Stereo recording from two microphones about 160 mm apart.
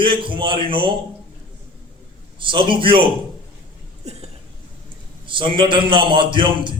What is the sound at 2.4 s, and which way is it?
Speech, 30° right (ahead or behind).